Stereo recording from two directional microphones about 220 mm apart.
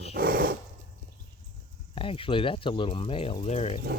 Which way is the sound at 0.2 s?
40° right (ahead or behind).